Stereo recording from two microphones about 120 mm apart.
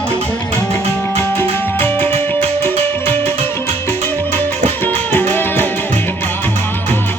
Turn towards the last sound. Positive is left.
turn(degrees=15)  # may be behind; listen again after turning